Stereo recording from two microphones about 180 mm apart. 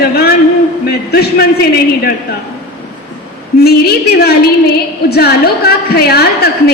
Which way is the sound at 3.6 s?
60° left (ahead or behind).